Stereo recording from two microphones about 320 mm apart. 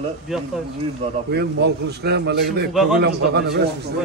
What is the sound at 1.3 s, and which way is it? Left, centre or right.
A man's voice, right.